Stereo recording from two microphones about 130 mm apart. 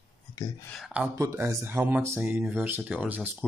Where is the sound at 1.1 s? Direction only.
25° right (ahead or behind).